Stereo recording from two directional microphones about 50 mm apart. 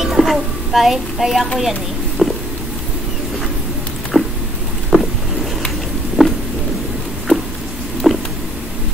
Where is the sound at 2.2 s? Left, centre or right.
Centre.